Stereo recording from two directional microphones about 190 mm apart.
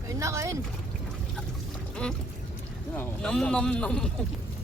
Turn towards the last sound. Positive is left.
turn(degrees=5)  # may be behind; listen again after turning